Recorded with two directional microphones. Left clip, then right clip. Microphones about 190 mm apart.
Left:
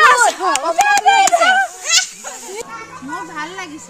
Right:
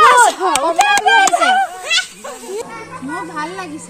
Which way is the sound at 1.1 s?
45° left (ahead or behind).